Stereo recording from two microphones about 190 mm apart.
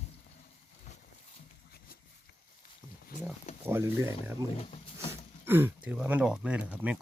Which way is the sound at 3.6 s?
10° right (ahead or behind).